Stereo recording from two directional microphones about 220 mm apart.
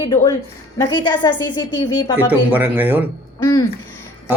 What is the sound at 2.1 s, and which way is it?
Speech, 10° right (ahead or behind).